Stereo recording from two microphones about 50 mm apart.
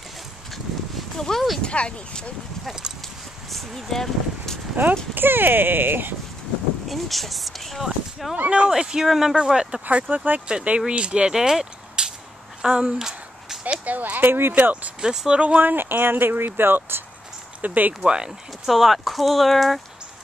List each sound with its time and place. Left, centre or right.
1.1 s speech: centre
3.4 s speech: centre
4.8 s speech: right
6.9 s speech: centre
8.5 s speech: right
9.8 s speech: right
10.9 s speech: right
13.8 s speech: right
14.5 s speech: right
15.0 s speech: centre
15.6 s speech: right
17.6 s speech: right
18.0 s speech: centre
18.7 s speech: centre